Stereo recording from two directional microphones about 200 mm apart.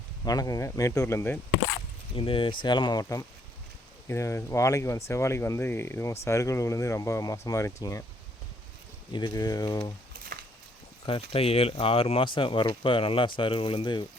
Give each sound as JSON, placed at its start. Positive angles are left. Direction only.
{"t": 0.3, "sound": "speech", "side_deg": 15}
{"t": 2.1, "sound": "speech", "side_deg": 25}
{"t": 9.1, "sound": "speech", "side_deg": 20}
{"t": 11.0, "sound": "speech", "side_deg": 25}